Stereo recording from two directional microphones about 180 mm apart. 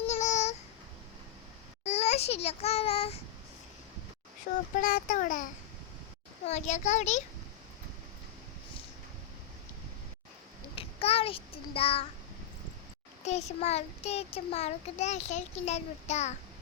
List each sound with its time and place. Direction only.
0.1 s babbling: 40° left (ahead or behind)
1.8 s a child's voice: 35° left (ahead or behind)
4.5 s a child's voice: 50° left (ahead or behind)
6.4 s child singing: 40° left (ahead or behind)
10.8 s a child's voice: 30° left (ahead or behind)
13.2 s child singing: 40° left (ahead or behind)